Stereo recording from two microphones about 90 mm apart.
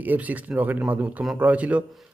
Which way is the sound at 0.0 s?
20° right (ahead or behind).